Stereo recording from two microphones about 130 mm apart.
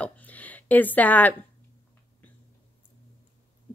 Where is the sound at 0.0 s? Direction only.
10° left (ahead or behind).